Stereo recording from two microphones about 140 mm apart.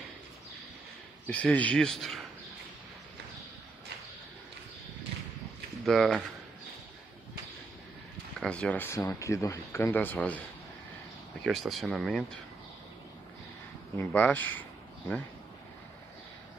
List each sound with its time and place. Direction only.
1.2 s speech: 10° left (ahead or behind)
5.9 s speech: centre (ahead or behind)
8.4 s speech: 5° left (ahead or behind)
11.4 s speech: centre (ahead or behind)
13.9 s speech: 15° left (ahead or behind)